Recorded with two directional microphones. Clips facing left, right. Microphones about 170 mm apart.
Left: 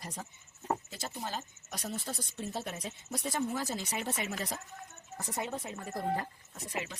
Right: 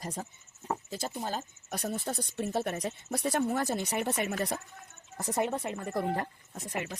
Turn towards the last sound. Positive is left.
turn(degrees=-50)  # may be behind; listen again after turning